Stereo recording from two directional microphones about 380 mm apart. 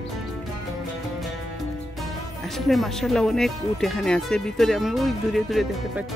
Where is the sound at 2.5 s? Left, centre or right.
Centre.